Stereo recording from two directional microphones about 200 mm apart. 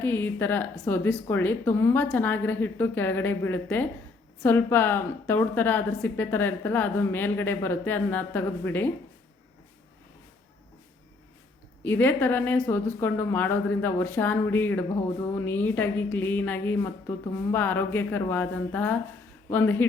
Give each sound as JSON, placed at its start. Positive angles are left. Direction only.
{"t": 0.0, "sound": "a woman's voice", "side_deg": 10}
{"t": 11.8, "sound": "a woman's voice", "side_deg": 10}